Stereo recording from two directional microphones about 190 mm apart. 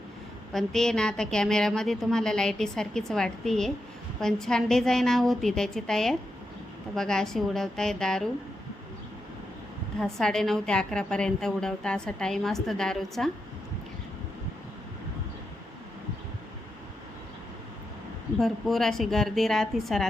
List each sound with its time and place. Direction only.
0.5 s a woman's voice: centre (ahead or behind)
10.0 s a woman's voice: centre (ahead or behind)
18.3 s a woman's voice: centre (ahead or behind)